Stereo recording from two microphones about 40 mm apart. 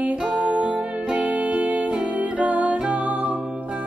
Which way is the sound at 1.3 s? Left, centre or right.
Right.